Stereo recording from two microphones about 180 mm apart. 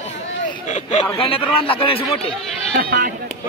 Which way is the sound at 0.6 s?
40° left (ahead or behind).